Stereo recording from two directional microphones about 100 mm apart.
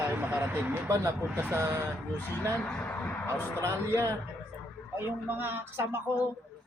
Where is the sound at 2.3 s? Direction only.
20° left (ahead or behind).